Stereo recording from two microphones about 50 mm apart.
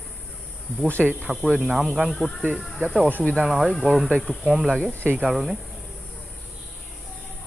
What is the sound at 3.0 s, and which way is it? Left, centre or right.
Speech, left.